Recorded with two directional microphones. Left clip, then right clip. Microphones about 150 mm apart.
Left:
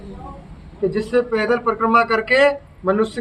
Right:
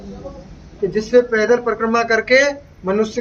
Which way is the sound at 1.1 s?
10° right (ahead or behind).